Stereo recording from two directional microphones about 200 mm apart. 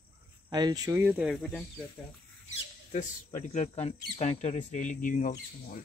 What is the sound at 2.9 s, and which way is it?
Speech, 40° left (ahead or behind).